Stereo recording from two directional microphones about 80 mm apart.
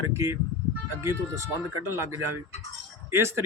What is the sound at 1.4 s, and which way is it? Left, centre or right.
Speech, right.